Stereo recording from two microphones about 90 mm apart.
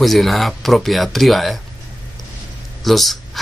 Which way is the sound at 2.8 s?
Centre (ahead or behind).